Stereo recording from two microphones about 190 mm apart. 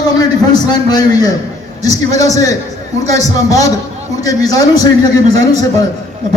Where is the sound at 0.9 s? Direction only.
20° left (ahead or behind).